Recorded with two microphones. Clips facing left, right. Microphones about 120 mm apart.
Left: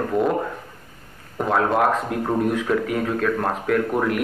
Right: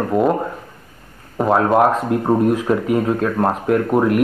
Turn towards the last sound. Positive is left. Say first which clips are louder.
# right 5 dB
turn(degrees=-25)  # may be behind; listen again after turning